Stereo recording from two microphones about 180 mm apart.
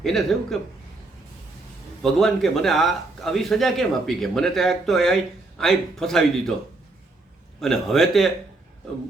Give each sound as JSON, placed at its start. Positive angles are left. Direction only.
{"t": 0.0, "sound": "a man's voice", "side_deg": 0}
{"t": 2.0, "sound": "a man's voice", "side_deg": 0}
{"t": 7.6, "sound": "a man's voice", "side_deg": 0}